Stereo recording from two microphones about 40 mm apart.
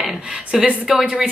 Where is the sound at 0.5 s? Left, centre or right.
Centre.